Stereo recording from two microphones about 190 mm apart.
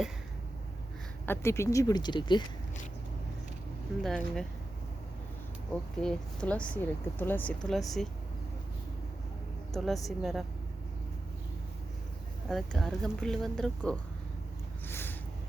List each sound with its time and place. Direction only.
1.3 s speech: 15° left (ahead or behind)
4.0 s speech: 5° left (ahead or behind)
6.0 s speech: 5° left (ahead or behind)
9.7 s speech: centre (ahead or behind)
12.5 s speech: centre (ahead or behind)
14.8 s a sound: 10° left (ahead or behind)